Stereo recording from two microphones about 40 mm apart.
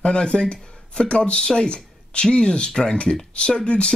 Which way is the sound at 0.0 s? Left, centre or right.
Left.